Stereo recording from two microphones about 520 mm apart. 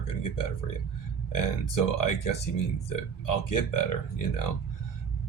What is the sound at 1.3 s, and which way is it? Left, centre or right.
Speech, left.